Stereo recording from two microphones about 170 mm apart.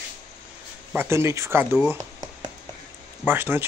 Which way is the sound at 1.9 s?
20° right (ahead or behind).